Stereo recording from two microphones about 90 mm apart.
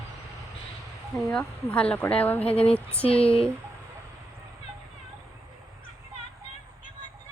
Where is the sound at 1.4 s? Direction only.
15° left (ahead or behind).